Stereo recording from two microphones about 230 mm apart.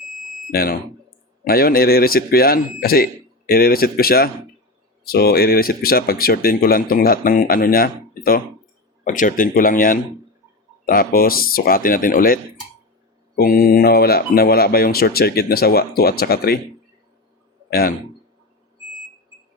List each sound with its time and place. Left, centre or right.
0.5 s speech: left
13.4 s speech: left
17.7 s a man's voice: left